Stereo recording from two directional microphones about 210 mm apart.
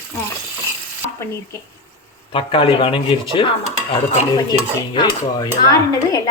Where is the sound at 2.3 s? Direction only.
25° left (ahead or behind).